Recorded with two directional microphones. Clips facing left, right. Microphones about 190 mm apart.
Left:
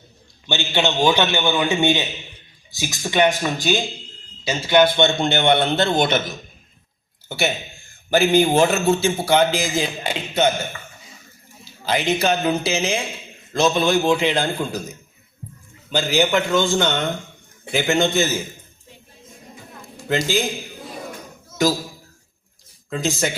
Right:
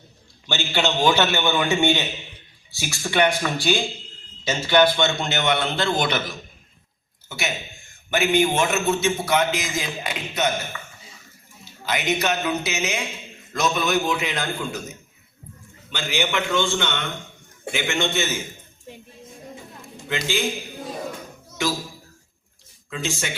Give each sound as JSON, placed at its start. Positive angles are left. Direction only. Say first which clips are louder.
{"t": 0.4, "sound": "a man's voice", "louder": "left 2 dB", "side_deg": 15}
{"t": 4.9, "sound": "a man's voice", "louder": "left 5 dB", "side_deg": 25}
{"t": 11.9, "sound": "a man's voice", "louder": "left 4 dB", "side_deg": 30}
{"t": 15.9, "sound": "a man's voice", "louder": "left 7 dB", "side_deg": 40}
{"t": 20.1, "sound": "a man's voice", "louder": "left 5 dB", "side_deg": 40}
{"t": 21.6, "sound": "a man's voice", "louder": "left 6 dB", "side_deg": 40}
{"t": 22.9, "sound": "a man's voice", "louder": "left 6 dB", "side_deg": 40}